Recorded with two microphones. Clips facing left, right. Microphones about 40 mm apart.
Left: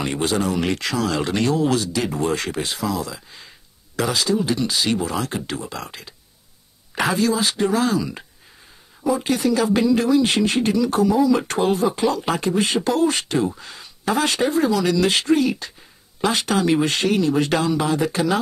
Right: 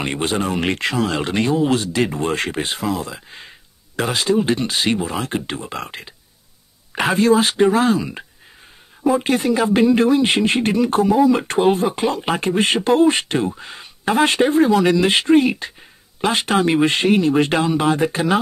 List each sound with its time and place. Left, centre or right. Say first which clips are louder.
0.0 s speech: right 1 dB; right
4.9 s speech: right 1 dB; right